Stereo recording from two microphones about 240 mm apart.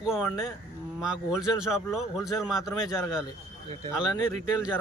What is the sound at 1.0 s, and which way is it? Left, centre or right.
Speech, centre.